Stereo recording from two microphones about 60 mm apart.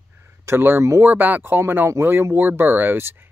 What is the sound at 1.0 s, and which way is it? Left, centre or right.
Speech, right.